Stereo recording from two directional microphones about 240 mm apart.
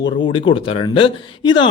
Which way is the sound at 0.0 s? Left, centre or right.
Centre.